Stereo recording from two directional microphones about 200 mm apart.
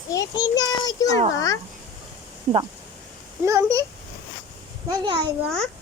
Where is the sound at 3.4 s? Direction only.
15° right (ahead or behind).